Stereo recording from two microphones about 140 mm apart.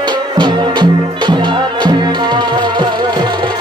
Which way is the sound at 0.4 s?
35° right (ahead or behind).